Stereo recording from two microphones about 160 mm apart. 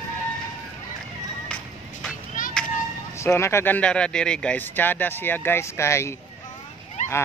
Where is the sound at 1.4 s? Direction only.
10° left (ahead or behind).